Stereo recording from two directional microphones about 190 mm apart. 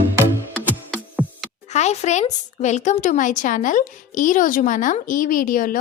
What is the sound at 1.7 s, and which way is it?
Speech, 35° left (ahead or behind).